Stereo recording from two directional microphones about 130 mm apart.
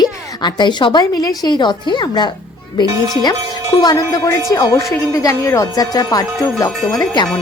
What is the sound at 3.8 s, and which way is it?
Speech, 25° left (ahead or behind).